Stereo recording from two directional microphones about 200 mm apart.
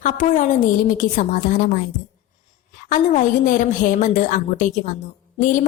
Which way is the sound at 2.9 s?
40° left (ahead or behind).